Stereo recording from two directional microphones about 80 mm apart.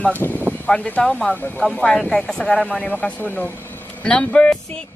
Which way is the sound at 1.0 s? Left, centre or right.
Centre.